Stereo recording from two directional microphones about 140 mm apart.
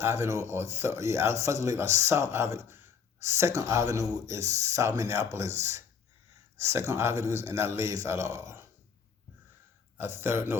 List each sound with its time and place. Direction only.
0.0 s speech: 20° right (ahead or behind)
10.0 s speech: 15° right (ahead or behind)